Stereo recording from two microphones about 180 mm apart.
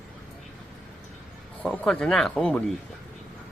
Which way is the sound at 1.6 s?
5° left (ahead or behind).